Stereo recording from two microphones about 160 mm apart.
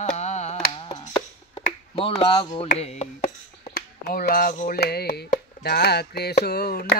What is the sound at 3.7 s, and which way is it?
Speech, 75° left (ahead or behind).